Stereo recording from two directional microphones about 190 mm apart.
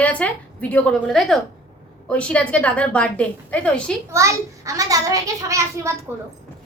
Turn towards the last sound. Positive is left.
turn(degrees=-15)  # may be behind; listen again after turning